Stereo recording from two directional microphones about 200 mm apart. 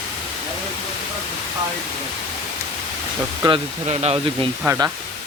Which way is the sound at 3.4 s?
20° right (ahead or behind).